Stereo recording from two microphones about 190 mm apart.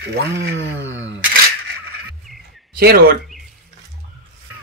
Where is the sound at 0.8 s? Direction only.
80° right.